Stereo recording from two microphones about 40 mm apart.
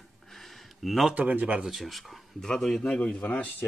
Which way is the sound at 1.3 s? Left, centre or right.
Right.